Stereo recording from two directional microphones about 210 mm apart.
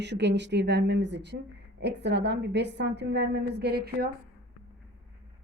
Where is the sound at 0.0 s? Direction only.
55° right (ahead or behind).